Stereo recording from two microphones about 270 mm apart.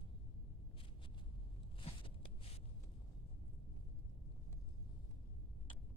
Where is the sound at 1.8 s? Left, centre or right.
Centre.